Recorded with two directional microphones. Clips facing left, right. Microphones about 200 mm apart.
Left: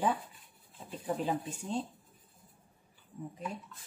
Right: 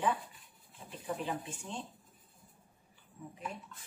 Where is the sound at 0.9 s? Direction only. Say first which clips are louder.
Left 4 dB; 40° left (ahead or behind).